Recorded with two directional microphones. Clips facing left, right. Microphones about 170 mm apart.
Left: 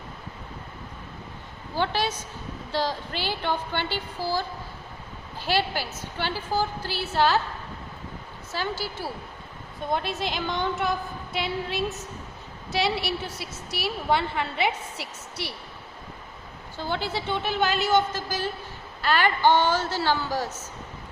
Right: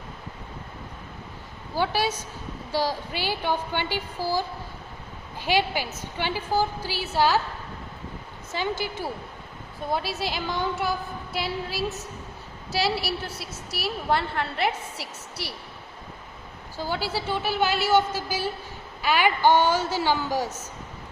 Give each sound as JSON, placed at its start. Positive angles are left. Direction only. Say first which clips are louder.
{"t": 1.7, "sound": "a woman's voice", "louder": "right 1 dB", "side_deg": -10}
{"t": 5.5, "sound": "a woman's voice", "louder": "right 2 dB", "side_deg": -15}
{"t": 8.5, "sound": "a woman's voice", "louder": "right 2 dB", "side_deg": -15}
{"t": 9.9, "sound": "a woman's voice", "louder": "even", "side_deg": -5}
{"t": 16.7, "sound": "a woman's voice", "louder": "right 1 dB", "side_deg": -5}